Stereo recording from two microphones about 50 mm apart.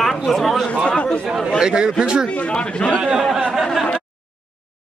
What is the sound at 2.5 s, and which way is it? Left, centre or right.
Speech, left.